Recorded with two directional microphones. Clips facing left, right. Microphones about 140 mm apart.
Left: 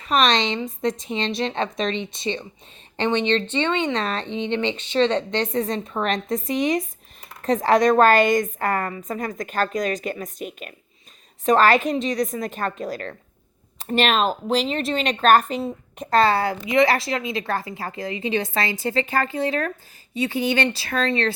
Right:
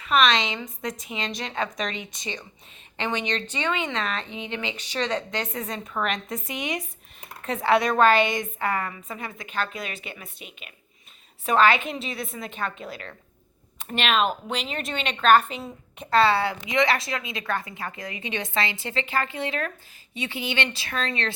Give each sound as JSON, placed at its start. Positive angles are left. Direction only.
{"t": 0.0, "sound": "a woman's voice", "side_deg": 35}